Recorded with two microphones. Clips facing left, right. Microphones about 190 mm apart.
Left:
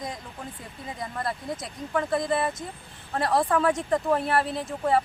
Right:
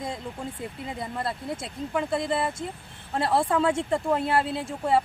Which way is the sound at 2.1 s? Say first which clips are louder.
Left 2 dB; 25° right (ahead or behind).